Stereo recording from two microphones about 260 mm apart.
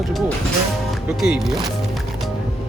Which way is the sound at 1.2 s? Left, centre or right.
Centre.